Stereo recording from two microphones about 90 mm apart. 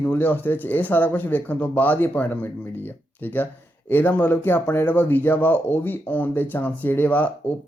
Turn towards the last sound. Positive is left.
turn(degrees=15)  # may be behind; listen again after turning